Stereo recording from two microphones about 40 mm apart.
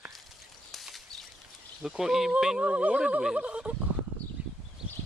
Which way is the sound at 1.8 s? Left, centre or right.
Centre.